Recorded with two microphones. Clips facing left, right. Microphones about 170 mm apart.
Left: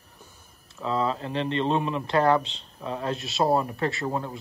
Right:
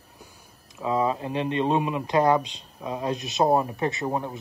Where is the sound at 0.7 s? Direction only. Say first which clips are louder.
Right 2 dB; 15° right (ahead or behind).